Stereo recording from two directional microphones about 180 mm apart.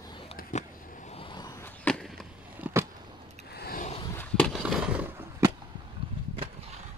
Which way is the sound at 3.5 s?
65° left (ahead or behind).